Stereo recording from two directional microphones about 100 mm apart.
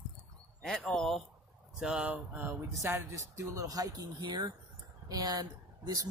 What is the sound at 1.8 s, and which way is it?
Speech, 10° right (ahead or behind).